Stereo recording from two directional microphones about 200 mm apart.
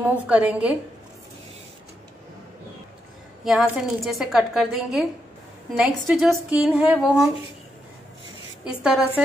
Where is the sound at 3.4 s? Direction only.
Centre (ahead or behind).